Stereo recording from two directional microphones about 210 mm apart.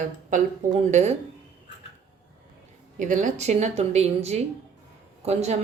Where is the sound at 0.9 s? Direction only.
35° right (ahead or behind).